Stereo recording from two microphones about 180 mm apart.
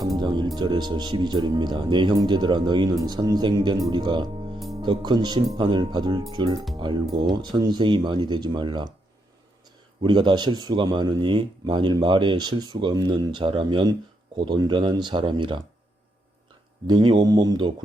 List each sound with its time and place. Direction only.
0.0 s music: 20° right (ahead or behind)
0.5 s speech: 25° right (ahead or behind)
16.8 s speech: 25° right (ahead or behind)